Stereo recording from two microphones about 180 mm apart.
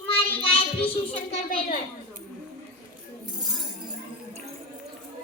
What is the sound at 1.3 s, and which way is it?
Speech, 50° left (ahead or behind).